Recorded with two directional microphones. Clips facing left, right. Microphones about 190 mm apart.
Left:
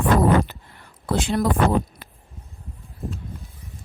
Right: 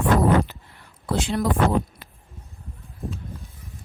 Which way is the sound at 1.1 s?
50° left (ahead or behind).